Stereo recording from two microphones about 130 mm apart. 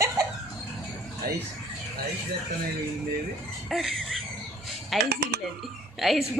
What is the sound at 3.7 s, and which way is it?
A woman's voice, centre (ahead or behind).